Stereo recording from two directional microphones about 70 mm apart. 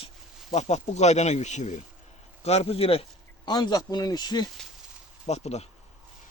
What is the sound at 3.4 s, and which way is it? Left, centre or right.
Speech, left.